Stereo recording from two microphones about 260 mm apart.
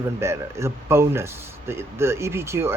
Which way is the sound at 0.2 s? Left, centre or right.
Centre.